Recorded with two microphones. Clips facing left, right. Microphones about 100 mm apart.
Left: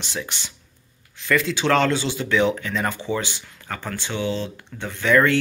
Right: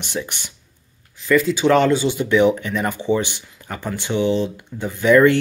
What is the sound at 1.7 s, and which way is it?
Speech, 15° right (ahead or behind).